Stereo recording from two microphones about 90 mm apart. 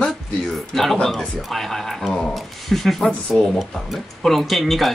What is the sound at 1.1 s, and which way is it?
Speech, centre (ahead or behind).